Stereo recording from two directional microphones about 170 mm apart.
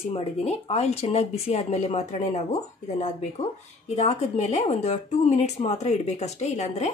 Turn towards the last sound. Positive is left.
turn(degrees=40)  # may be behind; listen again after turning